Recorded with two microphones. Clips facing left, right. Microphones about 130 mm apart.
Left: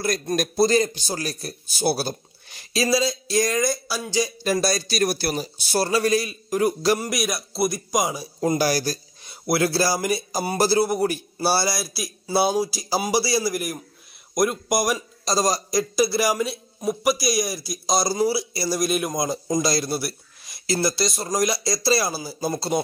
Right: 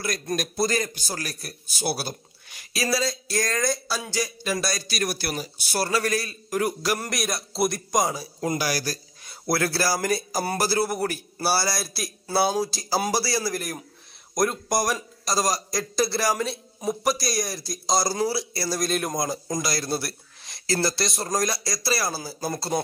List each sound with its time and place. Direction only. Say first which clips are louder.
0.0 s a man's voice: left 4 dB; 35° left (ahead or behind); by 4.1 s 5° left (ahead or behind)
4.4 s a man's voice: left 5 dB; 35° left (ahead or behind)
7.0 s a man's voice: left 3 dB; 5° left (ahead or behind)
8.4 s a man's voice: left 6 dB; 30° left (ahead or behind)
11.8 s a man's voice: left 2 dB; 5° left (ahead or behind)
15.2 s a man's voice: left 3 dB; 25° left (ahead or behind)